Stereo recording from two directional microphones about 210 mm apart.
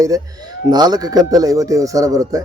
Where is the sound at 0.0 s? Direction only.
20° right (ahead or behind).